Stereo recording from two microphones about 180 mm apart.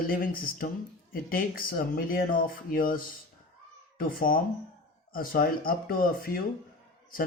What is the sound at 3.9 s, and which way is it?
Speech, 50° left (ahead or behind).